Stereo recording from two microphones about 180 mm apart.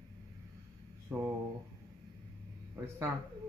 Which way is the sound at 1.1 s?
10° right (ahead or behind).